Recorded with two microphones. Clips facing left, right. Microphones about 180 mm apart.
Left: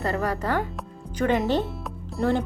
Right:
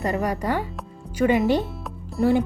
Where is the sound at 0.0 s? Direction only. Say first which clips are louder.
Right 2 dB; 15° right (ahead or behind).